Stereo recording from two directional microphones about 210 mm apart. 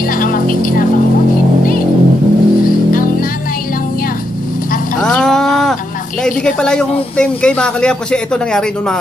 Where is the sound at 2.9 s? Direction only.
40° left (ahead or behind).